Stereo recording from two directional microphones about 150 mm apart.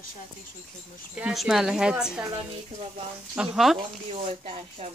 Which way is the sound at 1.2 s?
5° right (ahead or behind).